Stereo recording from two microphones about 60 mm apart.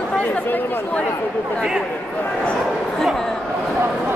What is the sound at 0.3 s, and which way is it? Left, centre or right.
Speech, left.